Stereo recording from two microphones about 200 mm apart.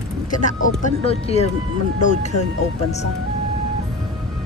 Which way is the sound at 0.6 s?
35° left (ahead or behind).